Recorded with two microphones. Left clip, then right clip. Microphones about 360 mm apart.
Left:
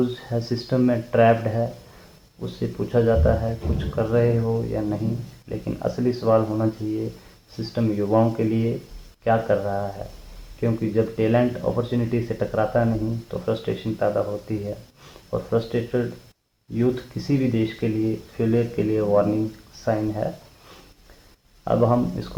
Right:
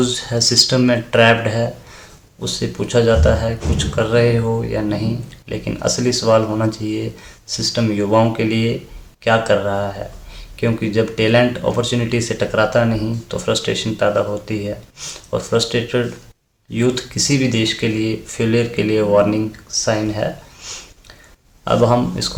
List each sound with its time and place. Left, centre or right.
0.0 s speech: left
21.6 s speech: left